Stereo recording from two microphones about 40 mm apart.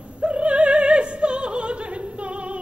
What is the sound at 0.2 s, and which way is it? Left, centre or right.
Opera, right.